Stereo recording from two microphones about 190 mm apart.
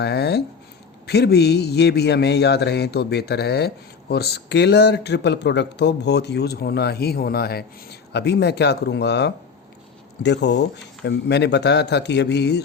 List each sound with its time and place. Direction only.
0.0 s speech: 60° left (ahead or behind)